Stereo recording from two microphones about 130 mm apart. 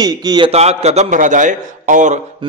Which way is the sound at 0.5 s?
55° right (ahead or behind).